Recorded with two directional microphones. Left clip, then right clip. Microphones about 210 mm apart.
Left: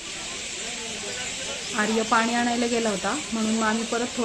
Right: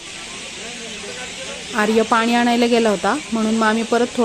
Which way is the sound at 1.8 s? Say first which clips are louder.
Right 6 dB; 50° right (ahead or behind).